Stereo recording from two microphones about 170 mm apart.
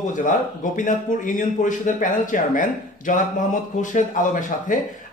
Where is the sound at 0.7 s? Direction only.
50° left (ahead or behind).